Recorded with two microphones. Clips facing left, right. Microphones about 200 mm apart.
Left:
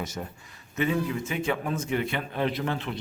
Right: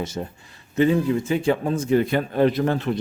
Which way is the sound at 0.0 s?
30° right (ahead or behind).